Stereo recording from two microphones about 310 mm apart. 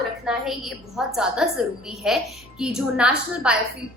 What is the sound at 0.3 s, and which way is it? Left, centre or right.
A woman's voice, centre.